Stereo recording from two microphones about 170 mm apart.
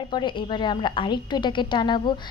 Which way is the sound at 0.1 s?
25° left (ahead or behind).